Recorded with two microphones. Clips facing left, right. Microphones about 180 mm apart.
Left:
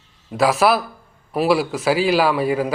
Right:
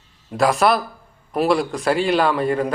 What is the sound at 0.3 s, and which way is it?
A man's voice, centre (ahead or behind).